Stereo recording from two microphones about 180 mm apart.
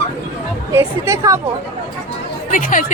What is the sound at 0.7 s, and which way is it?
Speech, 15° right (ahead or behind).